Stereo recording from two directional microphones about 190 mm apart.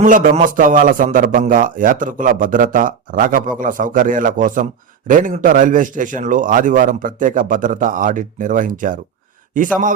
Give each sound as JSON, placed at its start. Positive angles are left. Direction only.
{"t": 0.0, "sound": "a man's voice", "side_deg": -45}